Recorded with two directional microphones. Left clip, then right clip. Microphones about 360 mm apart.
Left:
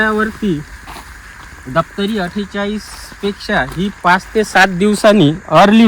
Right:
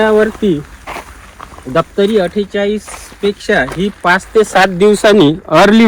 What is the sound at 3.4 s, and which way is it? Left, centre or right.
Speech, centre.